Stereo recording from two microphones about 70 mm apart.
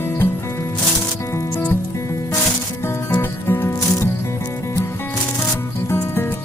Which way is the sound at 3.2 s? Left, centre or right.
Left.